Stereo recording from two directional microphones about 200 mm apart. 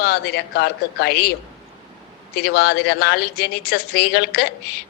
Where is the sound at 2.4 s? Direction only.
55° left (ahead or behind).